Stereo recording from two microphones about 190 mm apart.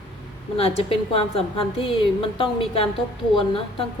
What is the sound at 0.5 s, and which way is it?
A woman's voice, 30° left (ahead or behind).